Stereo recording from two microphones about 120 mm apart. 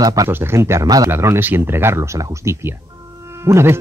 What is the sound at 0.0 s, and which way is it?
Speech, 30° right (ahead or behind).